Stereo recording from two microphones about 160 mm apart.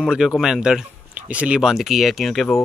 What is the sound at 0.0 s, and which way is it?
Speech, 5° right (ahead or behind).